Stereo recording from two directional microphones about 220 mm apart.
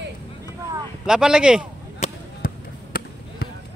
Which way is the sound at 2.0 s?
40° left (ahead or behind).